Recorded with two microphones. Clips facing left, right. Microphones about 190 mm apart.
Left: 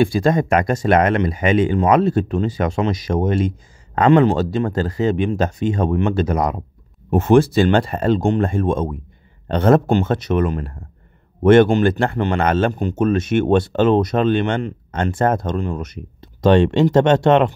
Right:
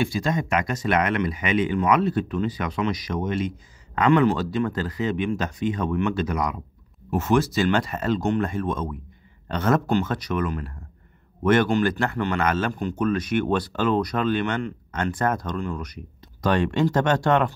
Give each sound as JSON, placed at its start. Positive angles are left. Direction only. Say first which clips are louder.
{"t": 0.0, "sound": "speech", "louder": "left 9 dB", "side_deg": 35}
{"t": 0.3, "sound": "speech", "louder": "left 7 dB", "side_deg": 55}
{"t": 0.7, "sound": "speech", "louder": "left 7 dB", "side_deg": 30}